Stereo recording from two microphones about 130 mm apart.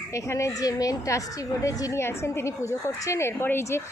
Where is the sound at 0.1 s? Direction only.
20° left (ahead or behind).